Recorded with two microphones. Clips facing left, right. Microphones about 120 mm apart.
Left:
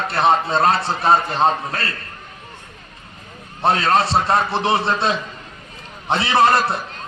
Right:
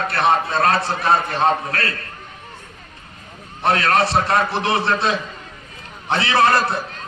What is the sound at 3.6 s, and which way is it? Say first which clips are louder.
A man's voice: left 1 dB; 25° left (ahead or behind).